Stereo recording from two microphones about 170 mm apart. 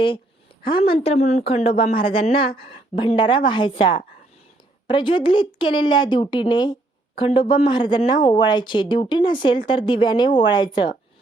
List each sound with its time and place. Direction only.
0.9 s speech: 40° left (ahead or behind)